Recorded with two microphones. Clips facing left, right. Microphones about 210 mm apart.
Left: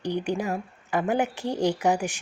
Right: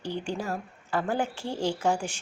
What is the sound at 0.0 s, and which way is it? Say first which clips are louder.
Speech: left 5 dB; 15° left (ahead or behind).